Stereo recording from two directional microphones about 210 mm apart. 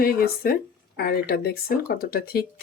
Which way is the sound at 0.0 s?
45° left (ahead or behind).